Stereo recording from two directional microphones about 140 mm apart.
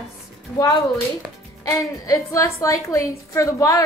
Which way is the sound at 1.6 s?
25° left (ahead or behind).